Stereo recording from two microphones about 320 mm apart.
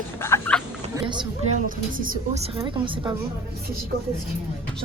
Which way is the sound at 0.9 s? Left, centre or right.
Centre.